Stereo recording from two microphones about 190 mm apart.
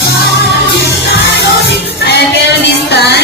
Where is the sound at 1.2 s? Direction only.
60° left (ahead or behind).